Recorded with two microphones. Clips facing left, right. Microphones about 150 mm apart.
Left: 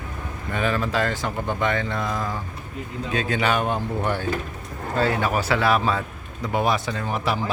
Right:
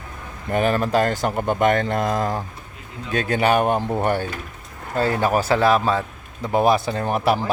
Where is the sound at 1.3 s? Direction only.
55° right (ahead or behind).